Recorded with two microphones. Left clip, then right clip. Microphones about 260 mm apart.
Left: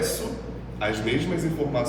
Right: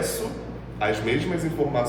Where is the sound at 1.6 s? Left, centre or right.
Right.